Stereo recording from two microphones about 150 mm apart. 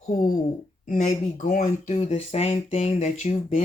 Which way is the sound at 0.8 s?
55° left (ahead or behind).